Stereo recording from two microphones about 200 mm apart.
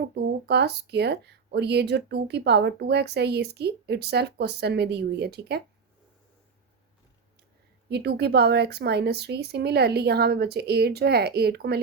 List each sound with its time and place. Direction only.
0.1 s speech: 55° right (ahead or behind)
7.9 s a woman's voice: 55° right (ahead or behind)